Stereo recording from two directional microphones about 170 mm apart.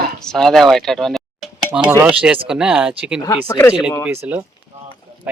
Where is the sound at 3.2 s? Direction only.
20° left (ahead or behind).